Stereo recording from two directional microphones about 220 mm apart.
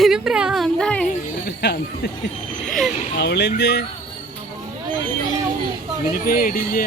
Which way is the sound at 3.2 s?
50° left (ahead or behind).